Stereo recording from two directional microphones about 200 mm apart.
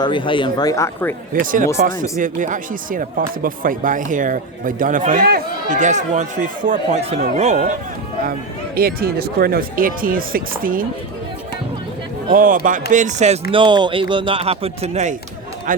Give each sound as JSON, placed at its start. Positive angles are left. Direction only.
{"t": 0.0, "sound": "speech", "side_deg": 25}
{"t": 1.3, "sound": "speech", "side_deg": -40}
{"t": 8.2, "sound": "speech", "side_deg": -45}
{"t": 12.3, "sound": "speech", "side_deg": -45}
{"t": 13.5, "sound": "speech", "side_deg": -25}